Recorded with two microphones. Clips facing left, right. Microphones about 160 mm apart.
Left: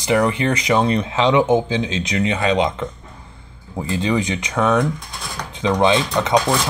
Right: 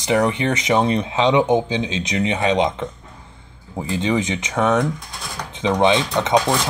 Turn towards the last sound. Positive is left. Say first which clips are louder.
# even
turn(degrees=-25)  # may be behind; listen again after turning